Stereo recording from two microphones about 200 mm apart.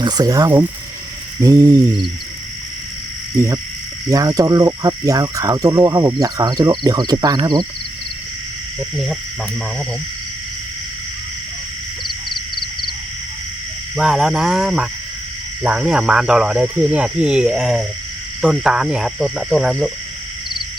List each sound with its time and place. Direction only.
0.0 s speech: 20° right (ahead or behind)
3.3 s speech: 15° right (ahead or behind)
13.9 s speech: centre (ahead or behind)